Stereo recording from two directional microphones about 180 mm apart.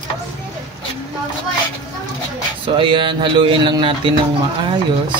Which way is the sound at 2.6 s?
30° right (ahead or behind).